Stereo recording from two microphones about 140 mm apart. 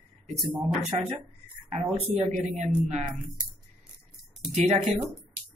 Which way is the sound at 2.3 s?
55° right (ahead or behind).